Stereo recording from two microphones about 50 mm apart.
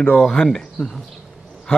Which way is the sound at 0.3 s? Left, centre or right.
Centre.